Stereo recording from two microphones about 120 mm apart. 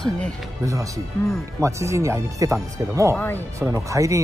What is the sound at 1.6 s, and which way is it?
Speech, 25° right (ahead or behind).